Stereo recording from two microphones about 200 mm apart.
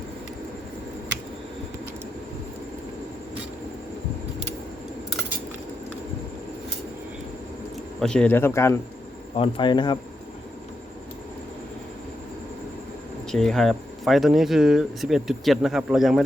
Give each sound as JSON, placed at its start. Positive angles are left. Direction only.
{"t": 7.9, "sound": "speech", "side_deg": 5}
{"t": 9.3, "sound": "speech", "side_deg": 25}
{"t": 13.3, "sound": "speech", "side_deg": 0}